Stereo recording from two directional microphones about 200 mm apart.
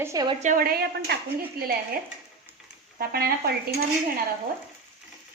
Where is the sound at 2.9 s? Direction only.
50° right (ahead or behind).